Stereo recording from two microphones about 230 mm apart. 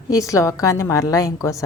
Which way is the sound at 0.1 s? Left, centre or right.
Centre.